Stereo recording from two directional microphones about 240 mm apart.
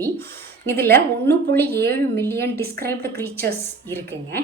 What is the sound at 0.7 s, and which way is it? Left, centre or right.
A woman's voice, centre.